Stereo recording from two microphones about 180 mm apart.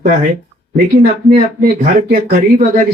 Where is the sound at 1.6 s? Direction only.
50° right (ahead or behind).